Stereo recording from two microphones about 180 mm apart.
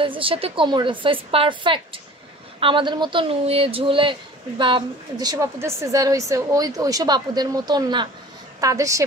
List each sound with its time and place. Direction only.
0.0 s a woman's voice: 30° right (ahead or behind)